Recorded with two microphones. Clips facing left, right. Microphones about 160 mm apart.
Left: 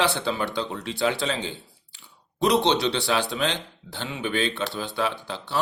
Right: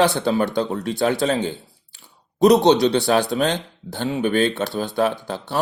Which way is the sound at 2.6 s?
45° right (ahead or behind).